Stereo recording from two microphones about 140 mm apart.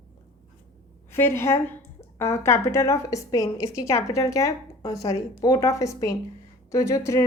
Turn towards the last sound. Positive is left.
turn(degrees=20)  # may be behind; listen again after turning